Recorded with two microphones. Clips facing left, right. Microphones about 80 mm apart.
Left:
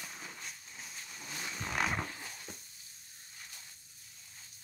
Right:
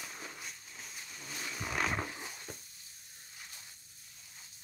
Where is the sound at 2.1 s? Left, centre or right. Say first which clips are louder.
Right 2 dB; centre.